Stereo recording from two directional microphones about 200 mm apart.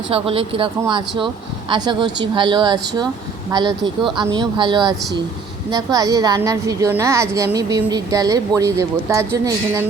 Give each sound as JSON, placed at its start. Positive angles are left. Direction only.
{"t": 0.1, "sound": "a woman's voice", "side_deg": -30}